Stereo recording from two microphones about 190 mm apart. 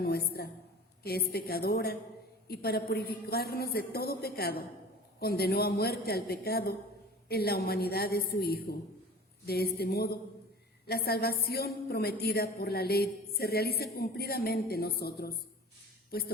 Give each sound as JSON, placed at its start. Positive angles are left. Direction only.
{"t": 0.0, "sound": "a woman's voice", "side_deg": 55}
{"t": 9.7, "sound": "a woman's voice", "side_deg": 55}